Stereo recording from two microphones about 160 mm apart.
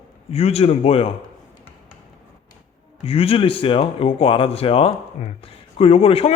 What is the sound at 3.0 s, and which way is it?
A man's voice, 35° left (ahead or behind).